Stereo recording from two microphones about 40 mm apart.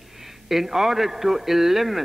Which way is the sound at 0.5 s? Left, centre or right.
Centre.